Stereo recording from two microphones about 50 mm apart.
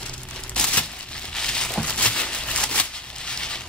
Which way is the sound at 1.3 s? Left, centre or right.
Centre.